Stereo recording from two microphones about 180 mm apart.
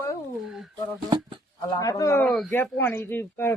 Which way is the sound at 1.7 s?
20° left (ahead or behind).